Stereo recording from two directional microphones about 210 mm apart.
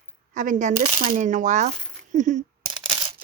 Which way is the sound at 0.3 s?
35° right (ahead or behind).